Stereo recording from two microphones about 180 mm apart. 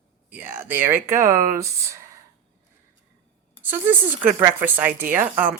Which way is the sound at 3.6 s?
10° right (ahead or behind).